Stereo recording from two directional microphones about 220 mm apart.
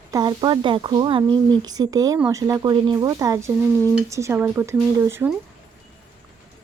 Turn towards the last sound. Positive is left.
turn(degrees=-10)  # may be behind; listen again after turning